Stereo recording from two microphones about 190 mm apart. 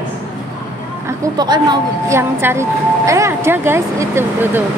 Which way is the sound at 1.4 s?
20° right (ahead or behind).